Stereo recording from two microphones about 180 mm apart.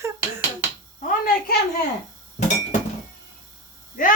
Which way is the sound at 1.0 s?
55° left (ahead or behind).